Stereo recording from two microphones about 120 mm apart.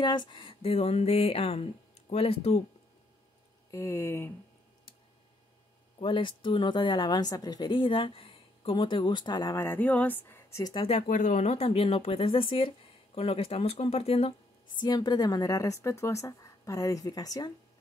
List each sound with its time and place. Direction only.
0.0 s speech: 40° left (ahead or behind); by 2.6 s 55° left (ahead or behind)
3.7 s speech: 20° left (ahead or behind)
5.9 s a woman's voice: 45° left (ahead or behind); by 9.7 s 30° left (ahead or behind)
9.7 s speech: 10° left (ahead or behind)
10.6 s a woman's voice: 40° left (ahead or behind)
10.9 s speech: 85° left; by 14.3 s 55° left (ahead or behind)
14.8 s speech: 35° left (ahead or behind)